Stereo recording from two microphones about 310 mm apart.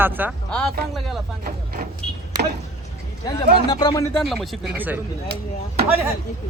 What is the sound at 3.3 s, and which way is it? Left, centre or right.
Speech, centre.